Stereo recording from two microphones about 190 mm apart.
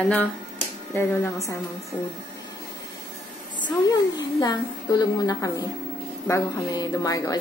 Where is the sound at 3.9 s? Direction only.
20° left (ahead or behind).